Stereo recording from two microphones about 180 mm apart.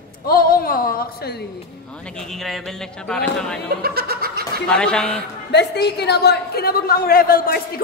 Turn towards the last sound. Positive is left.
turn(degrees=55)  # may be behind; listen again after turning